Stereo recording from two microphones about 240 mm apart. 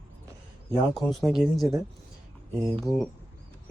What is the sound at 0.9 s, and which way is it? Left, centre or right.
Speech, centre.